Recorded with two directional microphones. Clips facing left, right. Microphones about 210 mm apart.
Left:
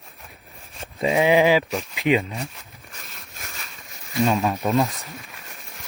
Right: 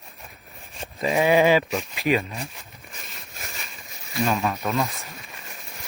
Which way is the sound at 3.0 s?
Centre (ahead or behind).